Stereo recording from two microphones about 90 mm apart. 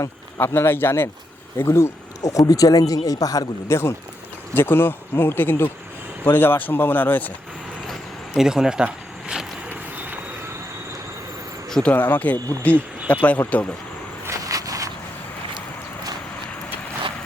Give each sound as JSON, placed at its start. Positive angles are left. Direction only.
{"t": 0.3, "sound": "speech", "side_deg": 25}
{"t": 4.5, "sound": "speech", "side_deg": 25}
{"t": 8.4, "sound": "a sound", "side_deg": -5}
{"t": 9.6, "sound": "train", "side_deg": -20}
{"t": 11.7, "sound": "speech", "side_deg": 10}
{"t": 14.3, "sound": "walk", "side_deg": -40}